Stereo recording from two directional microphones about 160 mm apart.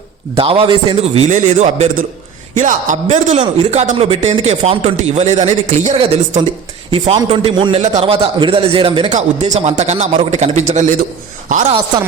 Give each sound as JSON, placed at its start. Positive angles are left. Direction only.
{"t": 0.3, "sound": "a man's voice", "side_deg": -35}
{"t": 1.3, "sound": "a man's voice", "side_deg": -45}